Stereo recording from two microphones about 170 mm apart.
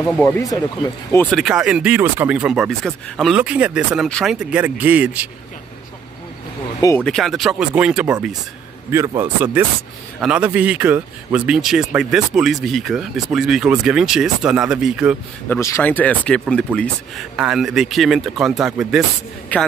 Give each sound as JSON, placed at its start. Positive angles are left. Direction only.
{"t": 0.0, "sound": "speech", "side_deg": 10}
{"t": 0.4, "sound": "speech", "side_deg": 20}
{"t": 1.2, "sound": "a man's voice", "side_deg": 0}
{"t": 7.0, "sound": "a man's voice", "side_deg": 5}
{"t": 8.9, "sound": "a man's voice", "side_deg": -20}
{"t": 15.4, "sound": "a man's voice", "side_deg": 15}
{"t": 19.5, "sound": "speech", "side_deg": 10}